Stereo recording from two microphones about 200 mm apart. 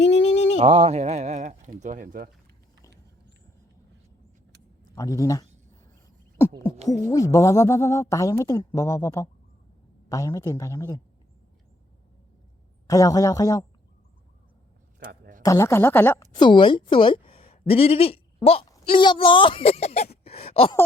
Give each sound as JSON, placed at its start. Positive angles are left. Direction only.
{"t": 0.0, "sound": "a sound", "side_deg": 60}
{"t": 0.6, "sound": "speech", "side_deg": -30}
{"t": 4.9, "sound": "a woman's voice", "side_deg": 15}
{"t": 6.8, "sound": "a woman's voice", "side_deg": 15}
{"t": 12.9, "sound": "a woman's voice", "side_deg": 15}
{"t": 14.9, "sound": "a sound", "side_deg": -45}
{"t": 15.4, "sound": "a woman's voice", "side_deg": 15}
{"t": 16.3, "sound": "a woman's voice", "side_deg": 25}
{"t": 20.2, "sound": "a sound", "side_deg": 30}